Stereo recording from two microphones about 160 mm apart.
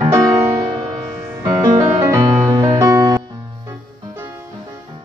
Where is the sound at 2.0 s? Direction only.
15° right (ahead or behind).